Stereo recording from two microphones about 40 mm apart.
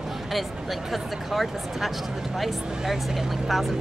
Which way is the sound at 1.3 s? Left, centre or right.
Centre.